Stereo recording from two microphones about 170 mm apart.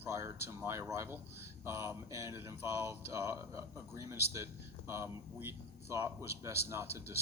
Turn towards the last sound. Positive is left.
turn(degrees=-15)  # may be behind; listen again after turning